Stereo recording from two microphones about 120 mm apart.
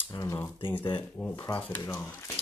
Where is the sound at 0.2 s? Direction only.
30° left (ahead or behind).